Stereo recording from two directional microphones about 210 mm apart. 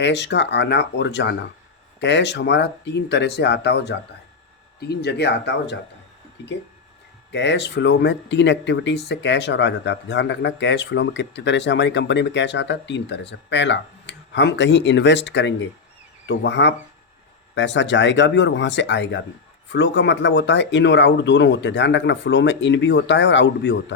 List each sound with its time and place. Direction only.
0.0 s speech: 55° left (ahead or behind)